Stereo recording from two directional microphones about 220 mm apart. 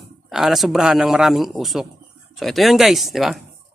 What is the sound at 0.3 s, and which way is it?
A man's voice, centre (ahead or behind).